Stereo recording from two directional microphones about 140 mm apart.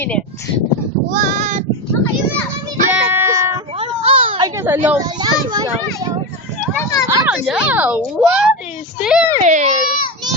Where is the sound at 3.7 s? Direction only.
45° right (ahead or behind).